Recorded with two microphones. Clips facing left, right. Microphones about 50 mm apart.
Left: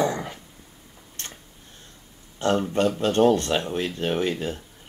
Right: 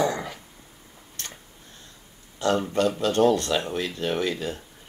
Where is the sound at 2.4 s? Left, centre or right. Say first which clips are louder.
Left 1 dB; left.